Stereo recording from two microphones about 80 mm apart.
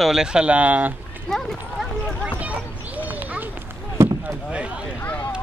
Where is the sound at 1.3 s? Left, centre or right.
Centre.